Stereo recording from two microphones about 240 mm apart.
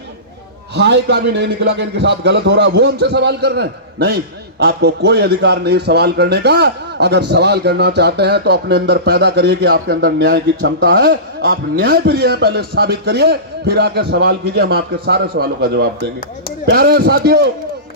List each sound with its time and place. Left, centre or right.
0.8 s a man's voice: right